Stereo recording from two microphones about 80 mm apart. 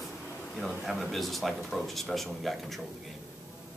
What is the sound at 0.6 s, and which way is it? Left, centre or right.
Speech, centre.